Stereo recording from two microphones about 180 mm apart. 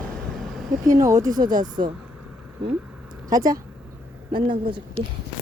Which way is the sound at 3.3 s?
20° right (ahead or behind).